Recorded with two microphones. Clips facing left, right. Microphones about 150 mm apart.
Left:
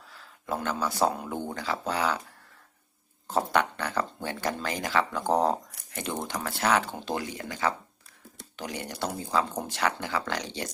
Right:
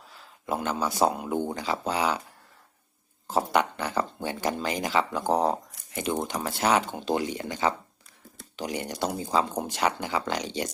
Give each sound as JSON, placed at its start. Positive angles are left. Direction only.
{"t": 0.2, "sound": "speech", "side_deg": -15}
{"t": 3.2, "sound": "speech", "side_deg": -10}
{"t": 5.3, "sound": "speech", "side_deg": -5}
{"t": 6.2, "sound": "speech", "side_deg": -20}